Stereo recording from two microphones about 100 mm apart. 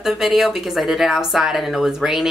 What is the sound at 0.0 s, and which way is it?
Speech, 5° right (ahead or behind).